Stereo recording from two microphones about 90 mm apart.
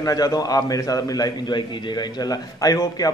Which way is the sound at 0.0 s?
45° left (ahead or behind).